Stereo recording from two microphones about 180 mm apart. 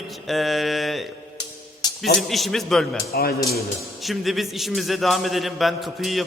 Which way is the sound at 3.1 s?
60° left (ahead or behind).